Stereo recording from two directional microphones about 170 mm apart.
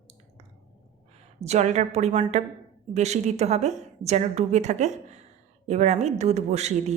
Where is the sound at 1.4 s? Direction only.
40° right (ahead or behind).